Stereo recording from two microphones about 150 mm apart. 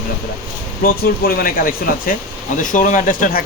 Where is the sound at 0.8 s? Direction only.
90° left.